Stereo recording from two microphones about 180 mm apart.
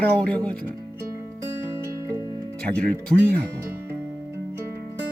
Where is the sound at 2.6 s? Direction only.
5° left (ahead or behind).